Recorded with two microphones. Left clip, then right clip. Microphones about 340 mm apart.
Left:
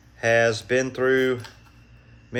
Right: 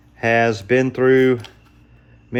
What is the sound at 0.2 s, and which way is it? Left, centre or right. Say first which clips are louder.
Speech: right 3 dB; centre.